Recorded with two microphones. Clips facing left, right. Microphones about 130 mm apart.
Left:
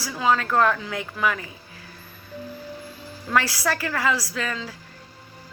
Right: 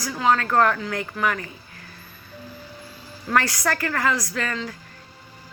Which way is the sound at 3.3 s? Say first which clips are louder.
Right 1 dB; 10° left (ahead or behind).